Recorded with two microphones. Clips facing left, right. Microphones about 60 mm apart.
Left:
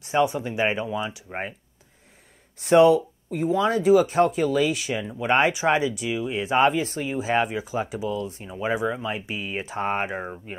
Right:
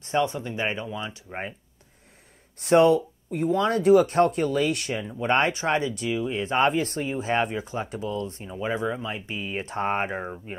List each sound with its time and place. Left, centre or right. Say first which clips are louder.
0.0 s speech: left 3 dB; centre
2.6 s speech: left 2 dB; centre
9.7 s speech: even; centre